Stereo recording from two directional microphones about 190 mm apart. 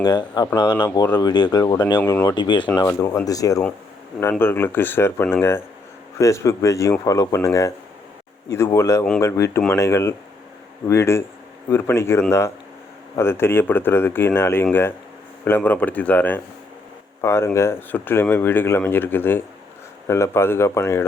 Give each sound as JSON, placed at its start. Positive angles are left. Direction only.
{"t": 0.0, "sound": "speech", "side_deg": 20}